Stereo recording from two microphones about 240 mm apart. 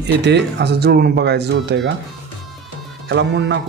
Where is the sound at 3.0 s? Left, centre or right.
Right.